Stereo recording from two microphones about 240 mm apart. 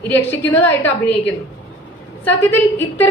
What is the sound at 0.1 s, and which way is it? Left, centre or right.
A woman's voice, centre.